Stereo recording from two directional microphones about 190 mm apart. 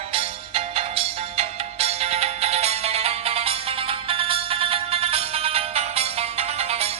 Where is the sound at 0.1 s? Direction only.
30° right (ahead or behind).